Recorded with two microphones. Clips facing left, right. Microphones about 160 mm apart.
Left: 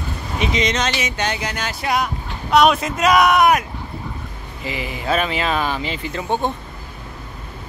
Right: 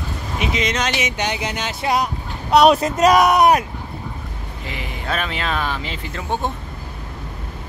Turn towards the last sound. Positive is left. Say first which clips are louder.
# left 3 dB
turn(degrees=0)  # may be behind; listen again after turning